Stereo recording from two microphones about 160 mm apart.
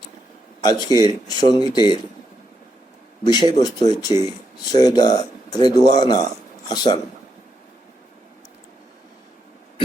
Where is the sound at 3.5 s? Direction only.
25° left (ahead or behind).